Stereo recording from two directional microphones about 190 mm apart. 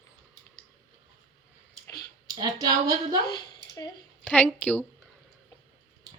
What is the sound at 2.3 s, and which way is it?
Speech, 20° right (ahead or behind).